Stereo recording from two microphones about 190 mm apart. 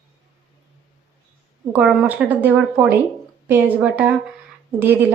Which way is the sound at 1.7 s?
5° right (ahead or behind).